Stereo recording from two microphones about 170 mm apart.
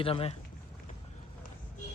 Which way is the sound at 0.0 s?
35° left (ahead or behind).